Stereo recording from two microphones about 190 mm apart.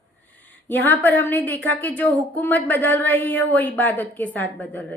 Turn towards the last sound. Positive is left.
turn(degrees=10)  # may be behind; listen again after turning